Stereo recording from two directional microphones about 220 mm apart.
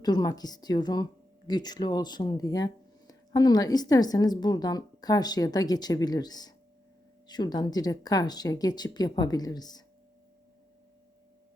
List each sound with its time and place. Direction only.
0.0 s a woman's voice: 15° left (ahead or behind)